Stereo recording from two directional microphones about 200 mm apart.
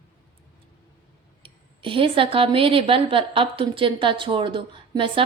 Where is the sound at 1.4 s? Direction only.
25° right (ahead or behind).